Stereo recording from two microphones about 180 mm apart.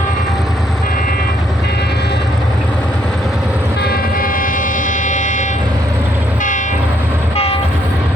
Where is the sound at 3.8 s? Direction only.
55° left (ahead or behind).